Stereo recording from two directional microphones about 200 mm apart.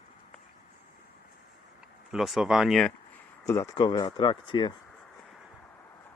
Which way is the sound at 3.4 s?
15° left (ahead or behind).